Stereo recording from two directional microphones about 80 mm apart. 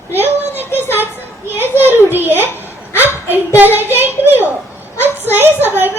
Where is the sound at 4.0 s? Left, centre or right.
Right.